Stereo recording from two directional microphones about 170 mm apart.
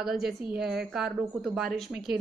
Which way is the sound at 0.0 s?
Centre (ahead or behind).